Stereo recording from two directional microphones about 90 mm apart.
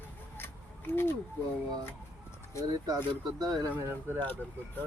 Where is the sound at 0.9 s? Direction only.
25° left (ahead or behind).